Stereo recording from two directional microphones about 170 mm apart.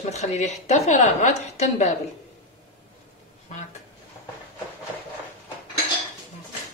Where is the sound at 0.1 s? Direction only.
40° left (ahead or behind).